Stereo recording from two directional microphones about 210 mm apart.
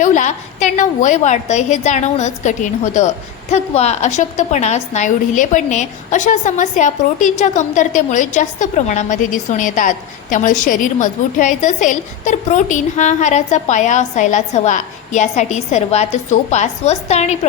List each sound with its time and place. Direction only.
0.0 s a woman's voice: 35° left (ahead or behind)